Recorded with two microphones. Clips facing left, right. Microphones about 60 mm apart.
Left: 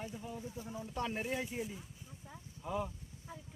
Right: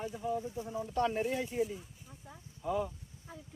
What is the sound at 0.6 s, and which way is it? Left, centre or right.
Speech, centre.